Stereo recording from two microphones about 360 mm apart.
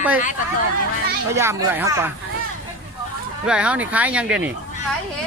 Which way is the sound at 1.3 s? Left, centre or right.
Centre.